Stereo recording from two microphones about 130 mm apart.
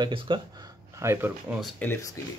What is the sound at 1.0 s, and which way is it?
Speech, 20° right (ahead or behind).